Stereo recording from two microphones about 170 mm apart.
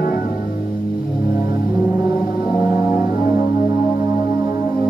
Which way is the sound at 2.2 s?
5° right (ahead or behind).